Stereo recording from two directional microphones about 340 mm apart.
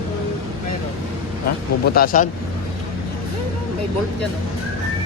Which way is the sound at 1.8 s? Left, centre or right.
Left.